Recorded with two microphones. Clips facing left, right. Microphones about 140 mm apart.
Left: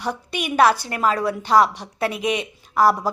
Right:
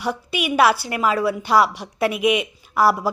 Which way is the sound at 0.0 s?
10° right (ahead or behind).